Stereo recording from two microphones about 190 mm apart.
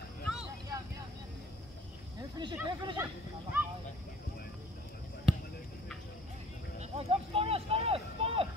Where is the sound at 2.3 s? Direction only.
20° right (ahead or behind).